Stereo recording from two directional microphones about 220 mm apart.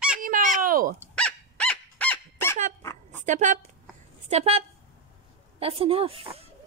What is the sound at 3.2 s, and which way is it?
A woman's voice, 35° right (ahead or behind).